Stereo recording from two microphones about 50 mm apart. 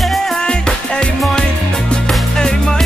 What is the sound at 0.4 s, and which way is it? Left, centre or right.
Music, centre.